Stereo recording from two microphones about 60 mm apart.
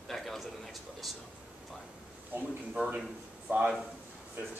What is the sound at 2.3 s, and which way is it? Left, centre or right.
Speech, right.